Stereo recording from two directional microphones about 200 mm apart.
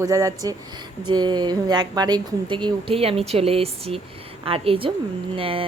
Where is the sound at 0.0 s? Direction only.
15° right (ahead or behind).